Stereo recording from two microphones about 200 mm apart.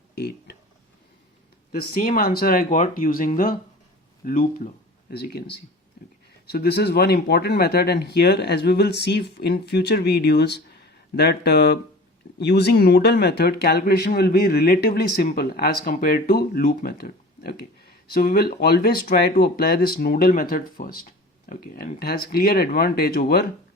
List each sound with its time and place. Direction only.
0.2 s a sound: 55° left (ahead or behind)
2.0 s speech: 45° left (ahead or behind)
5.1 s speech: 55° left (ahead or behind)